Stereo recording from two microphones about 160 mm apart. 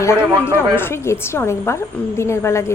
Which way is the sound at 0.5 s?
15° left (ahead or behind).